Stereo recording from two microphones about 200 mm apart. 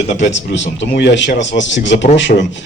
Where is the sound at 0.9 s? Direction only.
60° left (ahead or behind).